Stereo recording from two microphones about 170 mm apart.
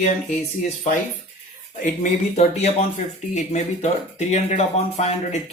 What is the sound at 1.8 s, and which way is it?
Speech, 45° left (ahead or behind).